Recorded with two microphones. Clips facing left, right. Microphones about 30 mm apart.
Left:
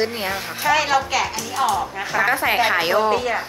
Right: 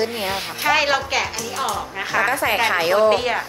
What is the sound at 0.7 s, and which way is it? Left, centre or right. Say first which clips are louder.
Speech: even; centre.